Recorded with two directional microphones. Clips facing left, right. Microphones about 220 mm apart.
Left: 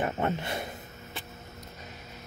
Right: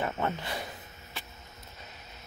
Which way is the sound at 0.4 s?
25° left (ahead or behind).